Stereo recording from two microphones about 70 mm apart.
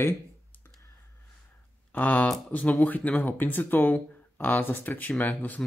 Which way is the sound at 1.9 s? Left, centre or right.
Left.